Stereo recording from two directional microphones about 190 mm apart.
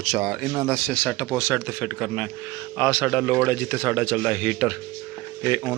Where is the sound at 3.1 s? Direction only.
5° right (ahead or behind).